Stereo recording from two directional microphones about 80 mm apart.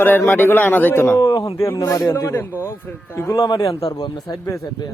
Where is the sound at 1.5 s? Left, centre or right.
Left.